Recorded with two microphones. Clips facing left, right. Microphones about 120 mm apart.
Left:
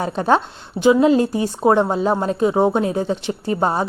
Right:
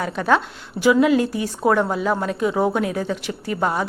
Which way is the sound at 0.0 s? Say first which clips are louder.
Left 2 dB; 30° left (ahead or behind).